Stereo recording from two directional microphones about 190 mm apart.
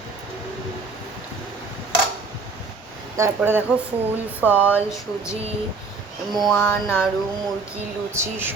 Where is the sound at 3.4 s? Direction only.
10° right (ahead or behind).